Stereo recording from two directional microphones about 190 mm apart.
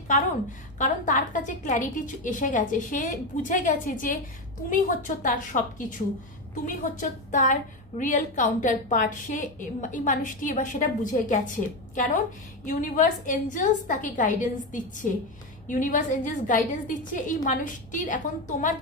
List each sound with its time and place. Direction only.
0.7 s a woman's voice: 45° left (ahead or behind)